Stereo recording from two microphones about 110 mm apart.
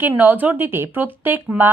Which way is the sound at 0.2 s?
15° right (ahead or behind).